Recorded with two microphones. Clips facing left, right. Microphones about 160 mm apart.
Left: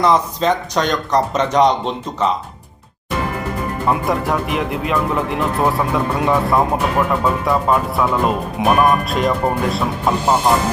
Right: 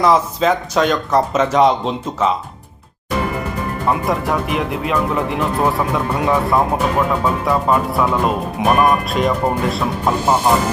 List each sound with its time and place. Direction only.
0.0 s speech: 5° right (ahead or behind)
3.8 s speech: centre (ahead or behind)